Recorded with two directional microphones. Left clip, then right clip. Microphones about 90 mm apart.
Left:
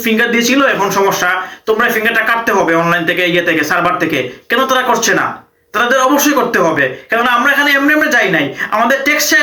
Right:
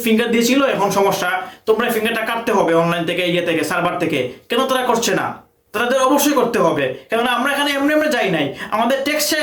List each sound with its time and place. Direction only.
0.0 s speech: 30° right (ahead or behind)